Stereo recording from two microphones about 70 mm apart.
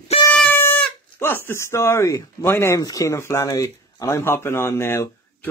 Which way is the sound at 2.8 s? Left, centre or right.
Left.